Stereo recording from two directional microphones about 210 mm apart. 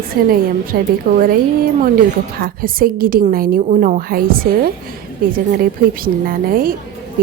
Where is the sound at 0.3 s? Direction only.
45° right (ahead or behind).